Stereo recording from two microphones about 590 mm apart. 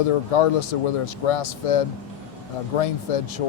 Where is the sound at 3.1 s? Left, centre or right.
Left.